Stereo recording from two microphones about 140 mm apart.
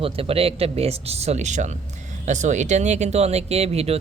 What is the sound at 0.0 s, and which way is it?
Speech, 45° right (ahead or behind).